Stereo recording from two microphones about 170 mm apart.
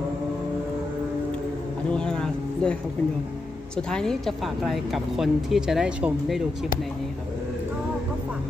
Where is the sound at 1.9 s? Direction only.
5° left (ahead or behind).